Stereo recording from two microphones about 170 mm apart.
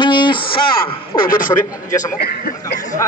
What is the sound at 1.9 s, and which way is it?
Music, 20° left (ahead or behind).